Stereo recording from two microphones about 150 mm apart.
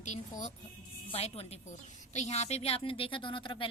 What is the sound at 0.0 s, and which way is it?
A woman's voice, 55° left (ahead or behind).